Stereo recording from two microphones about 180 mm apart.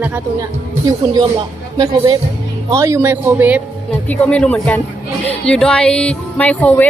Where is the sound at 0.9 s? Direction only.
20° right (ahead or behind).